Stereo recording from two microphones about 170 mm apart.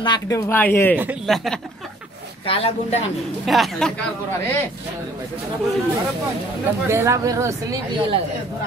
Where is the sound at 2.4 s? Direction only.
35° left (ahead or behind).